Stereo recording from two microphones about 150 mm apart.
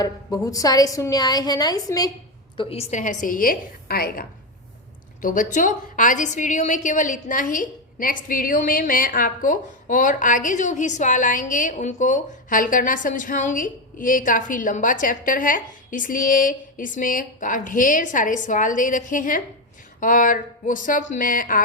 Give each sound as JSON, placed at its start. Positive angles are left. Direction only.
{"t": 0.0, "sound": "a woman's voice", "side_deg": 25}
{"t": 2.6, "sound": "a woman's voice", "side_deg": 40}
{"t": 3.0, "sound": "a woman's voice", "side_deg": 60}
{"t": 5.2, "sound": "a woman's voice", "side_deg": 60}